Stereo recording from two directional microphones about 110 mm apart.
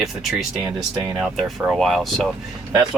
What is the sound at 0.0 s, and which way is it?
Speech, centre (ahead or behind).